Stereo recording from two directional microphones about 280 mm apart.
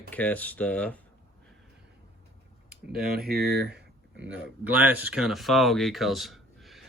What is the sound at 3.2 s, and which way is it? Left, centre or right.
Speech, right.